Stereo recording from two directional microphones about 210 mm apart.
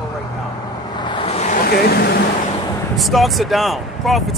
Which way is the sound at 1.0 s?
25° left (ahead or behind).